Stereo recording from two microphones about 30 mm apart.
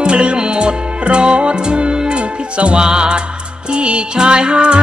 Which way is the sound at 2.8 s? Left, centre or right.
Right.